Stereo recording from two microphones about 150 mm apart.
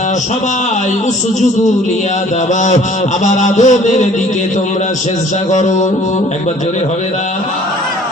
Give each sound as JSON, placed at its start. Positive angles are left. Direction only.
{"t": 3.2, "sound": "music", "side_deg": 50}
{"t": 5.5, "sound": "music", "side_deg": 50}